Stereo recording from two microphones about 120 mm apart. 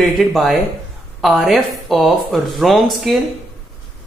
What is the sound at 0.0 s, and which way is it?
Speech, centre (ahead or behind).